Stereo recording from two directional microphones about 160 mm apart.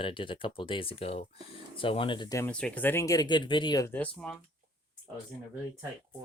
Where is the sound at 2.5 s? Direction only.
5° left (ahead or behind); by 3.9 s 25° left (ahead or behind).